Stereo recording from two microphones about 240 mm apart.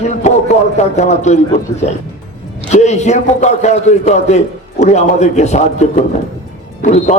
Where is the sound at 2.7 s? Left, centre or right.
Left.